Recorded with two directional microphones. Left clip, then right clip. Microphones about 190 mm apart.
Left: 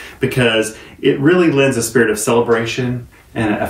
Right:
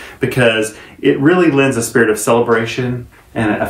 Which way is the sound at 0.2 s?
15° right (ahead or behind).